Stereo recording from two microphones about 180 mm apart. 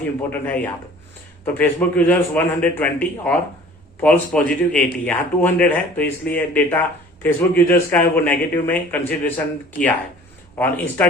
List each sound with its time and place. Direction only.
0.2 s a man's voice: 10° left (ahead or behind)